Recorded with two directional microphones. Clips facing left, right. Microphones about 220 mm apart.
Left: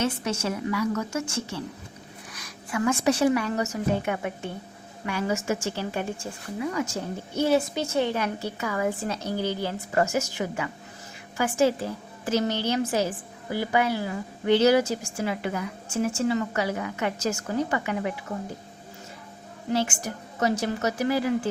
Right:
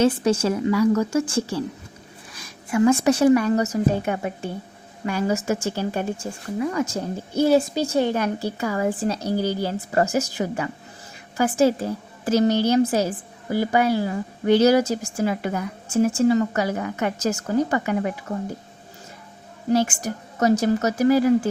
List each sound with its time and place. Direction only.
0.0 s a woman's voice: 30° right (ahead or behind)
2.3 s a sound: 25° right (ahead or behind)
3.0 s a woman's voice: 45° right (ahead or behind)
8.4 s a woman's voice: 35° right (ahead or behind)
20.4 s speech: 45° right (ahead or behind)